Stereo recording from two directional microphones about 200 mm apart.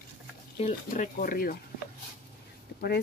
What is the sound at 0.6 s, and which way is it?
Speech, 40° left (ahead or behind).